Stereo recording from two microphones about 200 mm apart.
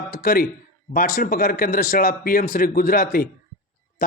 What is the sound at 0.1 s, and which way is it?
Speech, 45° left (ahead or behind).